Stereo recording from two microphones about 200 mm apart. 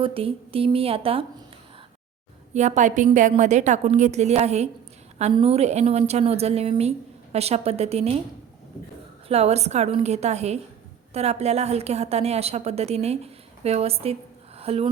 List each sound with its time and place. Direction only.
0.0 s a woman's voice: 25° right (ahead or behind)
2.5 s a woman's voice: 35° right (ahead or behind)
9.3 s a woman's voice: 30° right (ahead or behind)